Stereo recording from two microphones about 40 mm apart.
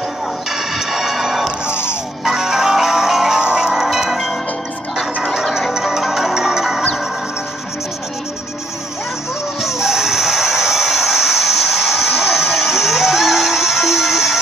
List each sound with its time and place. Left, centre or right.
0.5 s music: centre
1.7 s music: left
2.2 s music: centre
3.3 s music: right
3.7 s music: centre
4.1 s a sound: centre
5.5 s music: centre
9.6 s music: centre